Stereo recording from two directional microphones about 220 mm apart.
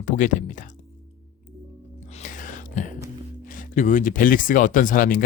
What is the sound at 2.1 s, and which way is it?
Music, 35° left (ahead or behind).